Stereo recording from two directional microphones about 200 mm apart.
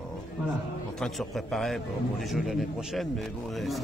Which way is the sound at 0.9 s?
Centre (ahead or behind).